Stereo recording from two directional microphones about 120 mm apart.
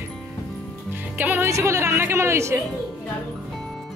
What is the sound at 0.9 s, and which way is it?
A woman's voice, 15° right (ahead or behind).